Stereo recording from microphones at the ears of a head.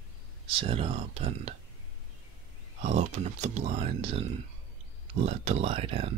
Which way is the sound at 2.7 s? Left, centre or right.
Right.